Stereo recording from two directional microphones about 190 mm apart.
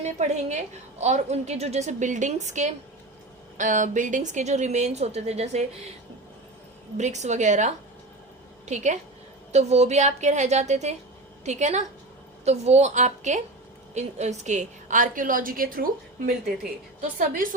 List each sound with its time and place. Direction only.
0.0 s a woman's voice: 35° right (ahead or behind)
6.9 s a woman's voice: 40° right (ahead or behind)